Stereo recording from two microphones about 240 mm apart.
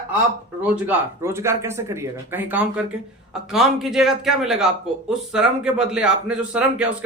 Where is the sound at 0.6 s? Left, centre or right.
Centre.